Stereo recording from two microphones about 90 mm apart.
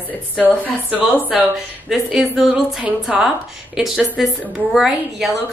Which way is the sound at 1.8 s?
5° right (ahead or behind).